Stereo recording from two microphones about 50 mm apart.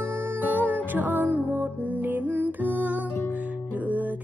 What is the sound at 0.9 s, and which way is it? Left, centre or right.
Music, right.